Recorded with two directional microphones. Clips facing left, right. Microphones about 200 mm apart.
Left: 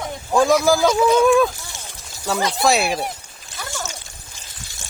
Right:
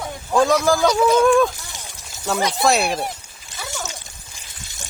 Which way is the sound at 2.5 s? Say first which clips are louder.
Left 1 dB; centre (ahead or behind).